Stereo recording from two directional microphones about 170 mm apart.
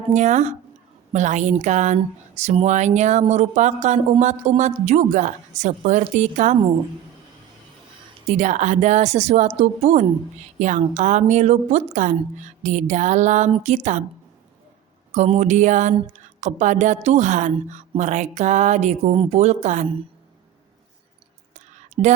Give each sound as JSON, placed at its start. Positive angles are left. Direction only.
{"t": 0.1, "sound": "speech", "side_deg": -45}
{"t": 8.3, "sound": "a woman's voice", "side_deg": -45}
{"t": 15.1, "sound": "speech", "side_deg": -45}
{"t": 21.5, "sound": "whispering", "side_deg": -40}